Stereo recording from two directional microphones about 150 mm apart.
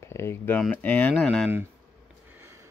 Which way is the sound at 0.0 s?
15° left (ahead or behind).